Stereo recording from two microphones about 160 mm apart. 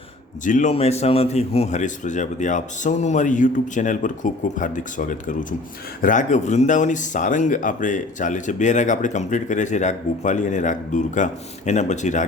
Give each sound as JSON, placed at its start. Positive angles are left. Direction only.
{"t": 0.4, "sound": "speech", "side_deg": 50}
{"t": 0.7, "sound": "speech", "side_deg": 40}